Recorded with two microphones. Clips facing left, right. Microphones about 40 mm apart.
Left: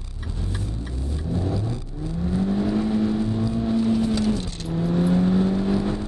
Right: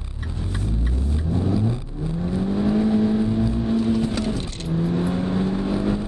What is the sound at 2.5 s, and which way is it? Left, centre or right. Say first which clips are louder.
Vehicle: right 5 dB; centre.